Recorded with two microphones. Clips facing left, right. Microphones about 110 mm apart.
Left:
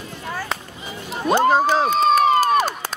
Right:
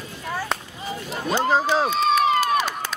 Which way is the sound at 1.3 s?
50° left (ahead or behind).